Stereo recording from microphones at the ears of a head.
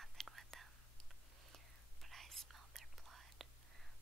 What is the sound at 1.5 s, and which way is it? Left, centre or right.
Whispering, right.